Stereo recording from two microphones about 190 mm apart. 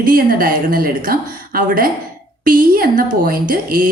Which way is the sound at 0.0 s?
45° right (ahead or behind).